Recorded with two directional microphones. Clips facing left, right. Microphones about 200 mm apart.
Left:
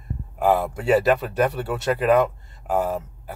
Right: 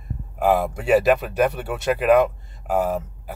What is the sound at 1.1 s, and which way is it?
Speech, 15° right (ahead or behind).